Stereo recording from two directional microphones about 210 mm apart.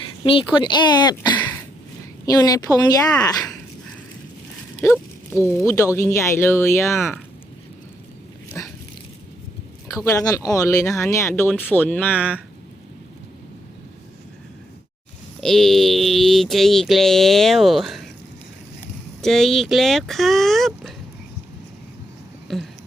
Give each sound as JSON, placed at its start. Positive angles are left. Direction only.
{"t": 0.3, "sound": "speech", "side_deg": 25}
{"t": 1.4, "sound": "a sound", "side_deg": 10}
{"t": 2.2, "sound": "speech", "side_deg": 15}
{"t": 4.8, "sound": "speech", "side_deg": 10}
{"t": 8.6, "sound": "dog", "side_deg": 10}
{"t": 9.9, "sound": "speech", "side_deg": 15}
{"t": 15.4, "sound": "mantra", "side_deg": 0}
{"t": 19.2, "sound": "mantra", "side_deg": 0}
{"t": 22.5, "sound": "mantra", "side_deg": 0}